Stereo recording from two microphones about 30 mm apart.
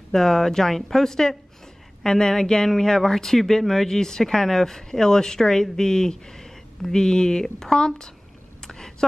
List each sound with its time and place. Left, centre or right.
0.1 s speech: centre
7.0 s speech: left
8.6 s a sound: centre